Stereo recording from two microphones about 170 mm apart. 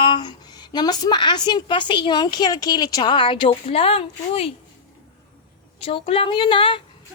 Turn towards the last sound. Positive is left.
turn(degrees=30)  # may be behind; listen again after turning